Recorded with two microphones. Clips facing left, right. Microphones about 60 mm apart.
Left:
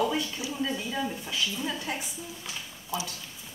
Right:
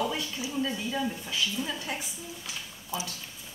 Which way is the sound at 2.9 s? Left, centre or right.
Right.